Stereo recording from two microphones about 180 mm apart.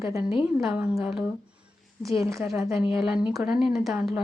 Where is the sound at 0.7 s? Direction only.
5° right (ahead or behind).